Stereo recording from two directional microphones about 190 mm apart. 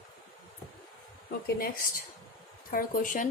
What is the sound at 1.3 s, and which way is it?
Speech, 50° left (ahead or behind).